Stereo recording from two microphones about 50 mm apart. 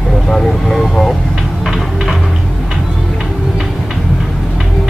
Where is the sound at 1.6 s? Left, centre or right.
Centre.